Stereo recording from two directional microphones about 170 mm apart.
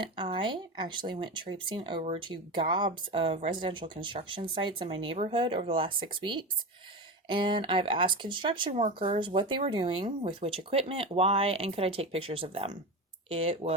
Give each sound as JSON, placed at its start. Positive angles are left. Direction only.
{"t": 0.0, "sound": "speech", "side_deg": -30}